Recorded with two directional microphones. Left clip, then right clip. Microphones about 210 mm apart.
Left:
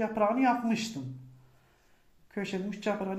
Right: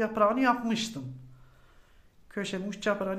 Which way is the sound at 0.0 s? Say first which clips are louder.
Right 2 dB; 20° right (ahead or behind).